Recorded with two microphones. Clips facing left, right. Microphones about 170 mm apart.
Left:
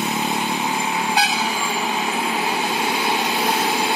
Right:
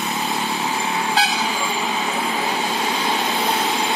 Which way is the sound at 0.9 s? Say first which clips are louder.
Right 1 dB; 10° left (ahead or behind).